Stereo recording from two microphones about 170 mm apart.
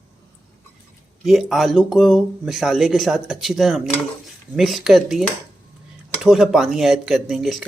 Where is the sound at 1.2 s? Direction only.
Centre (ahead or behind).